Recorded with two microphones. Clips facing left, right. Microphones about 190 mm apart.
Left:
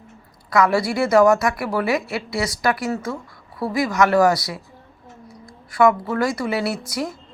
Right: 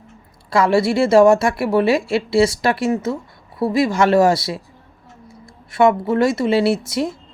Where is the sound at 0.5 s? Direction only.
25° right (ahead or behind).